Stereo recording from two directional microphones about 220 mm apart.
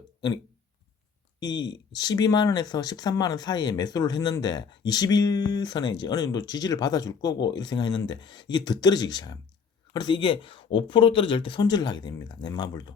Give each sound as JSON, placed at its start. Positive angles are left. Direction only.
{"t": 1.4, "sound": "speech", "side_deg": 20}